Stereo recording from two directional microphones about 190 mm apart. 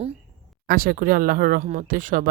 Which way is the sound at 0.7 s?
50° right (ahead or behind).